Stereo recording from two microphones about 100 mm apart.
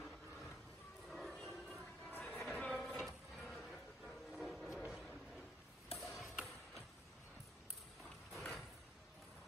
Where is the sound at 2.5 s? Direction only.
10° left (ahead or behind).